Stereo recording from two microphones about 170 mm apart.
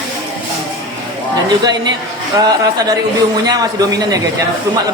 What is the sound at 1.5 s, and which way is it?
Speech, 25° right (ahead or behind).